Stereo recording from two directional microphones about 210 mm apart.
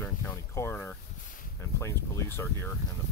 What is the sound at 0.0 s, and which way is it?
Boat, 10° left (ahead or behind).